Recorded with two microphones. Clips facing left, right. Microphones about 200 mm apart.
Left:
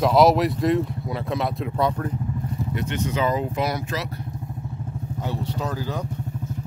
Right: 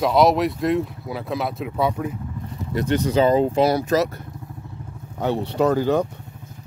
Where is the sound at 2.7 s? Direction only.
35° right (ahead or behind).